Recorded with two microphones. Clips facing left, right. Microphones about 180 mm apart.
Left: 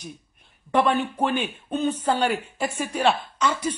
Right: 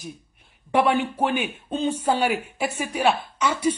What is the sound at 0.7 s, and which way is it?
A woman's voice, 10° right (ahead or behind).